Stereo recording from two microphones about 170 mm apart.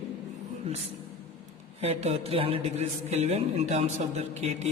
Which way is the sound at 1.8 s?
40° right (ahead or behind).